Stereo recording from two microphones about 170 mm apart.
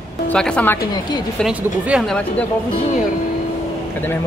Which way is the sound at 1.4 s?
5° right (ahead or behind).